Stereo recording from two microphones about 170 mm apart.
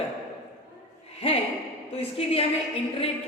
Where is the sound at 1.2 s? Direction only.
35° left (ahead or behind).